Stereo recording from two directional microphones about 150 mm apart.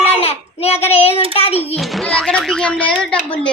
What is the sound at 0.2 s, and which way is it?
Child singing, 40° left (ahead or behind).